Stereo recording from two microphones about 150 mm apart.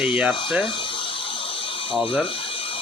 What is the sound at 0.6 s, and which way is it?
Speech, 35° left (ahead or behind).